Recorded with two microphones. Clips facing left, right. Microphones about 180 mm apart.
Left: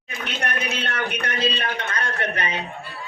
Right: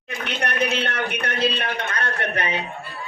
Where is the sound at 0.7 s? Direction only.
60° right (ahead or behind).